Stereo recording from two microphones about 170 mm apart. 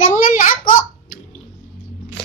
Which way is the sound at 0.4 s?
50° left (ahead or behind).